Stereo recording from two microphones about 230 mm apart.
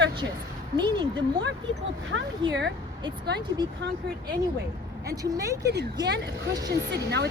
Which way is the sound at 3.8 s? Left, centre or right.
Right.